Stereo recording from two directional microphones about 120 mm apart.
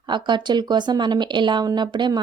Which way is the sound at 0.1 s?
40° right (ahead or behind).